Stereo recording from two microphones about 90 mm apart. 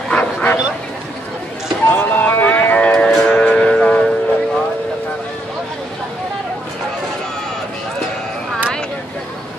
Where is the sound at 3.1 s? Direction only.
10° left (ahead or behind).